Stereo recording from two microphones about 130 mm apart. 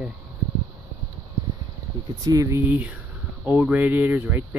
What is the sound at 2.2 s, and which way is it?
Speech, 25° right (ahead or behind).